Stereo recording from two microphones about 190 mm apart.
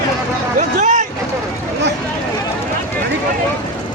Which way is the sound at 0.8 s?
40° right (ahead or behind).